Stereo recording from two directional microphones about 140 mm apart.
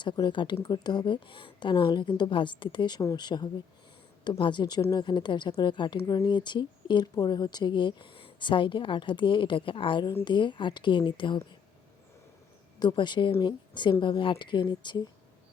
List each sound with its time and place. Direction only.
0.0 s speech: 35° left (ahead or behind)
12.8 s speech: 30° left (ahead or behind)